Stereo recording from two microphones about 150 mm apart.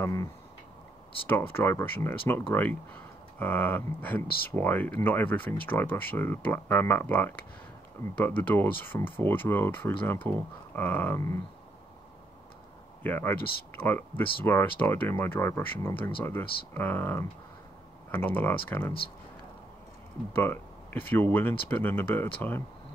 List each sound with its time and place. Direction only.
0.0 s tick-tock: 20° left (ahead or behind)
1.2 s speech: 15° left (ahead or behind)
13.0 s speech: 15° left (ahead or behind)
20.3 s speech: 15° left (ahead or behind)